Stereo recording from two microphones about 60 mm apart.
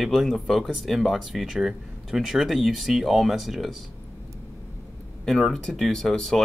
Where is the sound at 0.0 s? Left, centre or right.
Centre.